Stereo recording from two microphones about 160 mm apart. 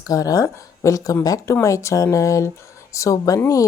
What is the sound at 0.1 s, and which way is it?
Speech, 20° left (ahead or behind).